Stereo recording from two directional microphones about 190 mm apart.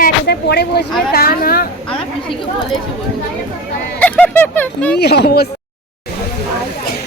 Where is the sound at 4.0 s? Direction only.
10° left (ahead or behind).